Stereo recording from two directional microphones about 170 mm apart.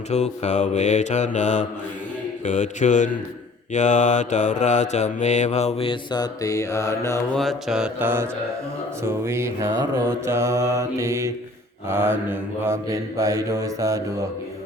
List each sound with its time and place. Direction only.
0.1 s mantra: 40° left (ahead or behind); by 7.2 s 15° left (ahead or behind)
7.3 s mantra: centre (ahead or behind); by 14.0 s 20° right (ahead or behind)